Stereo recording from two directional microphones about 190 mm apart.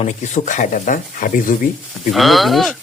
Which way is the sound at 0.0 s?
40° left (ahead or behind).